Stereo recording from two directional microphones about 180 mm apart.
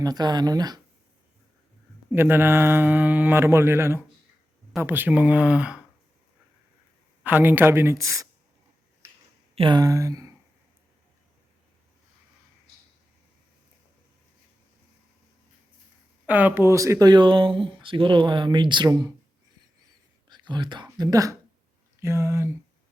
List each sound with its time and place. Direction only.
0.0 s speech: 20° right (ahead or behind)
2.0 s speech: 10° right (ahead or behind)
7.3 s speech: 10° right (ahead or behind)
9.6 s speech: 25° right (ahead or behind)
16.2 s speech: 10° right (ahead or behind)
20.3 s speech: 25° right (ahead or behind)